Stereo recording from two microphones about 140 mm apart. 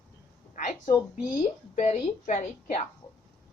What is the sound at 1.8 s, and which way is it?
A woman's voice, 55° left (ahead or behind).